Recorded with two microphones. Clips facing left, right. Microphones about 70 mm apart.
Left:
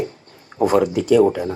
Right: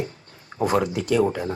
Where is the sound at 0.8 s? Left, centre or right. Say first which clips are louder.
Left 6 dB; right.